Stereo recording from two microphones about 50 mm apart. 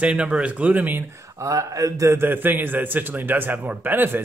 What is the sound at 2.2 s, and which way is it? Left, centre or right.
A man's voice, right.